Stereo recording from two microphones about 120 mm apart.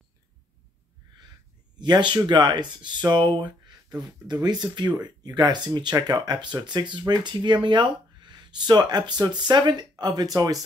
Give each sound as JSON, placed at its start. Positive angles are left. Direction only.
{"t": 1.8, "sound": "speech", "side_deg": -40}